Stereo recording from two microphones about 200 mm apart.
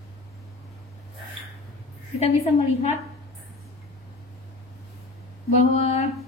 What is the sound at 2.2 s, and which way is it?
Speech, 30° left (ahead or behind).